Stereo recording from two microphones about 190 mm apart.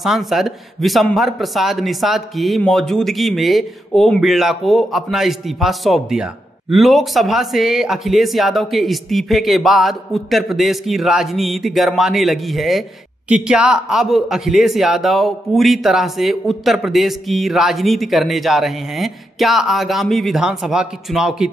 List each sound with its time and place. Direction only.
0.0 s a man's voice: centre (ahead or behind)